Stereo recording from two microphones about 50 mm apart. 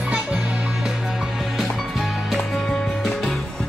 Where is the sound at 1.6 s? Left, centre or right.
Centre.